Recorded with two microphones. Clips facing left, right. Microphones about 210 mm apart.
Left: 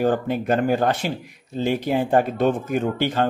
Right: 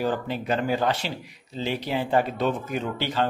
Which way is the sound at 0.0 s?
50° left (ahead or behind).